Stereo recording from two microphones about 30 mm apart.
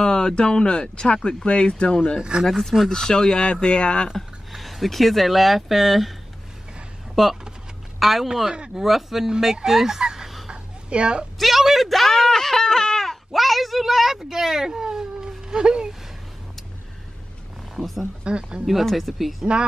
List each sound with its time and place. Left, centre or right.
0.0 s a sound: left
0.4 s speech: left
2.4 s speech: centre
3.6 s speech: left
4.1 s speech: centre
7.2 s speech: centre
10.5 s a sound: right
11.3 s speech: centre
12.1 s a sound: centre
13.3 s speech: centre
14.1 s speech: centre
17.7 s speech: centre
18.2 s speech: right
18.9 s speech: centre